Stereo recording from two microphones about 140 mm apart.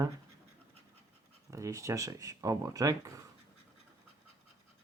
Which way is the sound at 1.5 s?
20° right (ahead or behind).